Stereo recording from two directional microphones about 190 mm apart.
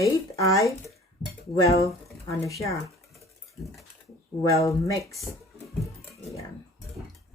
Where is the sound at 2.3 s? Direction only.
15° left (ahead or behind).